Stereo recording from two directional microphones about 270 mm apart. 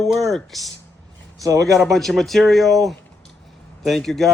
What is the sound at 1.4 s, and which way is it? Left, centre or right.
Speech, centre.